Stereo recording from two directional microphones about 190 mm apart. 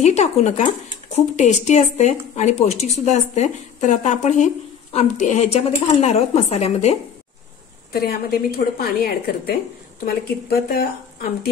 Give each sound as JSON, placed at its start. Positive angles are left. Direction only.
{"t": 0.0, "sound": "speech", "side_deg": 35}
{"t": 7.9, "sound": "a woman's voice", "side_deg": 55}